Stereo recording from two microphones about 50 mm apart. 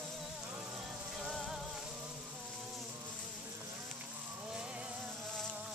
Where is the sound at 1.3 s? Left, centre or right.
Centre.